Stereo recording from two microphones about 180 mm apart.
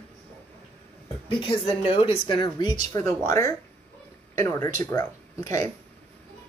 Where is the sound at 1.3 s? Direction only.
30° left (ahead or behind).